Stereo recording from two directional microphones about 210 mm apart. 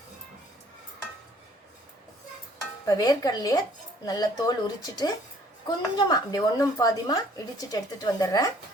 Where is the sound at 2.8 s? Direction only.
20° left (ahead or behind).